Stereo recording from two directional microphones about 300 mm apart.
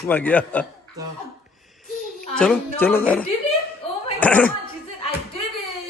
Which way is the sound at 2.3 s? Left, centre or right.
Centre.